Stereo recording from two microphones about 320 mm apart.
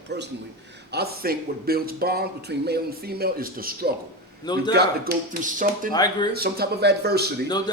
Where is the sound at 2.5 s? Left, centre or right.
Right.